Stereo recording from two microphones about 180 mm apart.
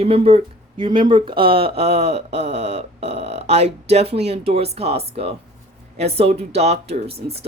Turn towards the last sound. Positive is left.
turn(degrees=-35)  # may be behind; listen again after turning